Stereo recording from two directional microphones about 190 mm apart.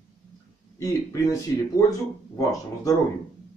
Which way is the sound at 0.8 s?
15° left (ahead or behind).